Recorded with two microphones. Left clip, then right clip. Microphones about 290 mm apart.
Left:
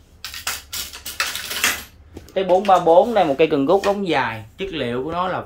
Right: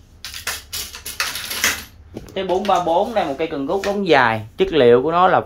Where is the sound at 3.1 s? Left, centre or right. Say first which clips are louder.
Left 5 dB; left.